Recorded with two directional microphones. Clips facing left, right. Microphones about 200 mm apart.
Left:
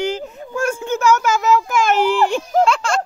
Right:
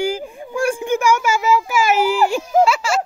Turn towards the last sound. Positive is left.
turn(degrees=-5)  # may be behind; listen again after turning